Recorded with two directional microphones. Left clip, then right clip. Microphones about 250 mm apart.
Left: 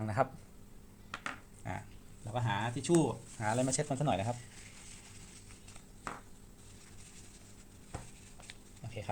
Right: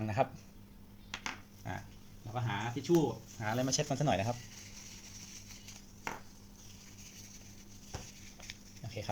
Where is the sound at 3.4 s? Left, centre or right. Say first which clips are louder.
Left 1 dB; centre.